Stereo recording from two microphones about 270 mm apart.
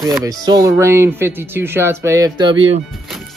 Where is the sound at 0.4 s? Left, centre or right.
Centre.